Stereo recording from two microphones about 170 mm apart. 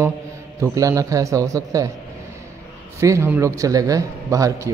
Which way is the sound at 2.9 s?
15° right (ahead or behind).